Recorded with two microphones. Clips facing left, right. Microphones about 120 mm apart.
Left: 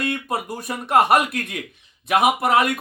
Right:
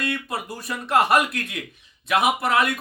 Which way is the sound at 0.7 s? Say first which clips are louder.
Left 2 dB; 50° left (ahead or behind).